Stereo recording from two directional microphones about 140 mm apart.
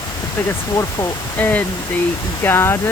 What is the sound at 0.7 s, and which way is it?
Speech, 25° left (ahead or behind).